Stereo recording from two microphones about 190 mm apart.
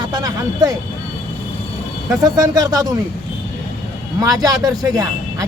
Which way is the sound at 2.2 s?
20° right (ahead or behind).